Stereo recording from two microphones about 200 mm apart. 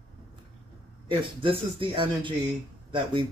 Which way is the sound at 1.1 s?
25° right (ahead or behind).